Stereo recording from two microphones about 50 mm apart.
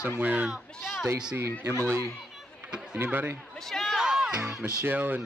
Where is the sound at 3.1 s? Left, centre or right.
Right.